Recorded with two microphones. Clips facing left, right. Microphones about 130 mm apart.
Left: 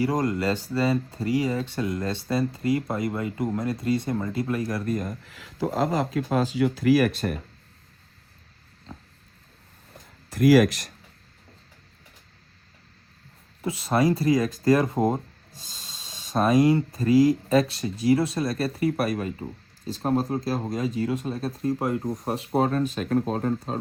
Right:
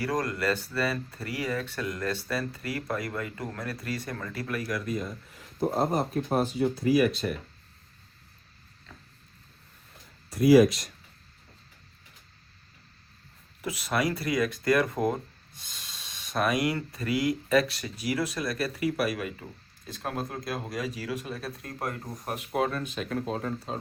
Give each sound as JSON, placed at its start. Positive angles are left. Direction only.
{"t": 0.0, "sound": "speech", "side_deg": 25}
{"t": 4.9, "sound": "speech", "side_deg": 45}
{"t": 5.2, "sound": "speech", "side_deg": 90}
{"t": 8.9, "sound": "a sound", "side_deg": 40}
{"t": 10.4, "sound": "speech", "side_deg": 75}
{"t": 13.6, "sound": "speech", "side_deg": 30}